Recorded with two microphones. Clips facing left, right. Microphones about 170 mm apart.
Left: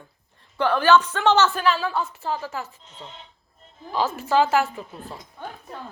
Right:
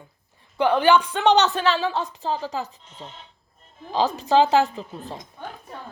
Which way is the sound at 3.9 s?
15° right (ahead or behind).